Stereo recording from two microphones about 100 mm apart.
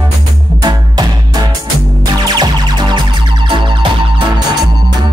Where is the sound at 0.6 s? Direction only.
45° right (ahead or behind).